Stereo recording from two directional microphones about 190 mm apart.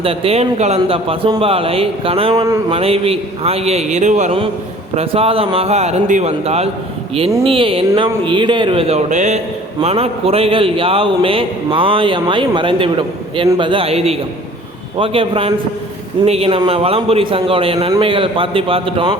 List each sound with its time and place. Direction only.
0.0 s a man's voice: 30° right (ahead or behind)
2.7 s a man's voice: 30° right (ahead or behind)